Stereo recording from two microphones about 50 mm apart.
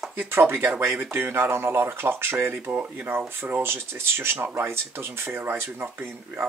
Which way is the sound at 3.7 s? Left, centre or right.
Right.